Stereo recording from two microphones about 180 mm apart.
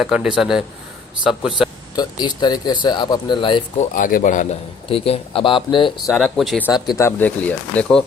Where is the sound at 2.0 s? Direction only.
25° left (ahead or behind).